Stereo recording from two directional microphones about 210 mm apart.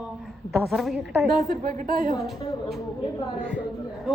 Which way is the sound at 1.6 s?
45° right (ahead or behind).